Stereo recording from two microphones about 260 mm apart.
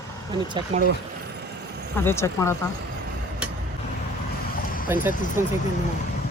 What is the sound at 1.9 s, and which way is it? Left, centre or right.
Speech, centre.